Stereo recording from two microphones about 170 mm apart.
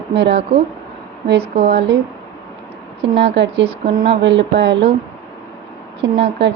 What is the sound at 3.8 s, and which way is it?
A woman's voice, 65° right (ahead or behind).